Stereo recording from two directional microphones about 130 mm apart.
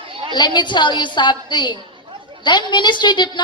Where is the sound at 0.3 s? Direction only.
35° left (ahead or behind).